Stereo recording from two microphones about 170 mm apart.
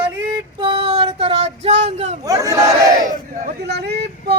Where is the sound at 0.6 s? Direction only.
30° right (ahead or behind).